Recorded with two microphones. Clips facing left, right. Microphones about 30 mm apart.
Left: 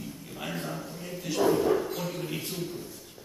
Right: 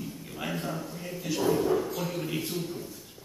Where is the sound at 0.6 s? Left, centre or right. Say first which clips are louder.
Right 1 dB; centre.